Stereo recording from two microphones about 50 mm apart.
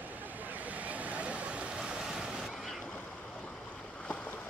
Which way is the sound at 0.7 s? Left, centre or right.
Right.